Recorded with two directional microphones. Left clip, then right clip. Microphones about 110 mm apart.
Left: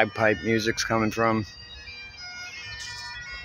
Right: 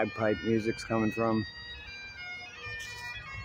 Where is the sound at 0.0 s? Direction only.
10° left (ahead or behind).